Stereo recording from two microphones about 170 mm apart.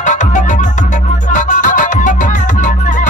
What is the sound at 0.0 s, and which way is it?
Music, 45° left (ahead or behind).